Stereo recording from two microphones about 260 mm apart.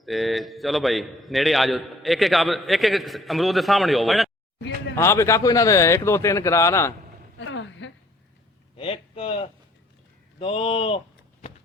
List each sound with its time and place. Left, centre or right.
0.0 s a man's voice: centre
7.3 s a sound: left
8.8 s speech: left